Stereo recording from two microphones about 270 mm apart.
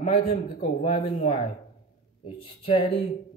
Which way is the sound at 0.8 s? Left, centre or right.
Centre.